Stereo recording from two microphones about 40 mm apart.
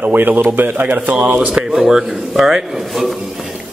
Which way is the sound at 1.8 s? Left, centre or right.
Centre.